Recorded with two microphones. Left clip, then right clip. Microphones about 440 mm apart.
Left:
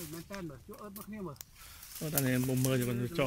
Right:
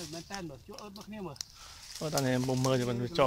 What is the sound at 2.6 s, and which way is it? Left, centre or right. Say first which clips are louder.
Speech: right 3 dB; centre.